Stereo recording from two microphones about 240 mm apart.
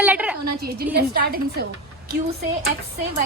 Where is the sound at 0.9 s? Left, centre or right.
Right.